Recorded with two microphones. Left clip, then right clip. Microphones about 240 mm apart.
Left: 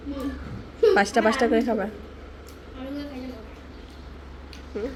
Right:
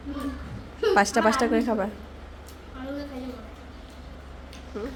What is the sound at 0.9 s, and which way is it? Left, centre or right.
Speech, centre.